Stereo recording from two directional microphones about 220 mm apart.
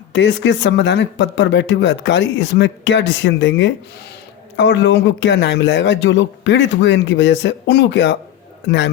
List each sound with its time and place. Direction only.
0.1 s speech: 55° left (ahead or behind)